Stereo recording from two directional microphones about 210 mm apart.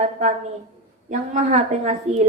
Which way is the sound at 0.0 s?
35° right (ahead or behind).